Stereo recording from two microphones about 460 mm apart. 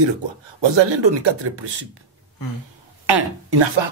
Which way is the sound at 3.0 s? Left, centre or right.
Right.